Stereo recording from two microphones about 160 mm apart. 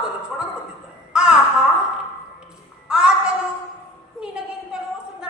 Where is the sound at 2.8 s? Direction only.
5° right (ahead or behind).